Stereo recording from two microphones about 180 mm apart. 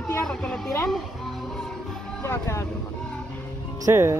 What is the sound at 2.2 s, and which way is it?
Speech, 15° left (ahead or behind).